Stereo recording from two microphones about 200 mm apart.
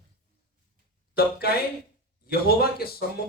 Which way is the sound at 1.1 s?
50° left (ahead or behind).